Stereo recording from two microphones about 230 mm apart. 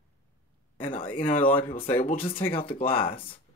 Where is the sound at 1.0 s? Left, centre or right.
Left.